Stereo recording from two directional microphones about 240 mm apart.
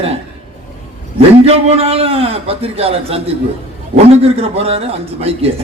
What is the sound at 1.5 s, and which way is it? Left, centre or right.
A man's voice, right.